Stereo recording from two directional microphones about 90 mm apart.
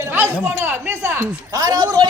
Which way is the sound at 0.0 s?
25° right (ahead or behind).